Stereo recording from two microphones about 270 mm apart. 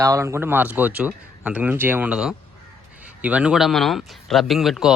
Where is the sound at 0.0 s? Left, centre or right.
Centre.